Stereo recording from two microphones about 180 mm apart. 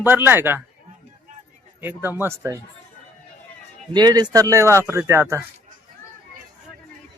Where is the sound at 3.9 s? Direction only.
20° right (ahead or behind).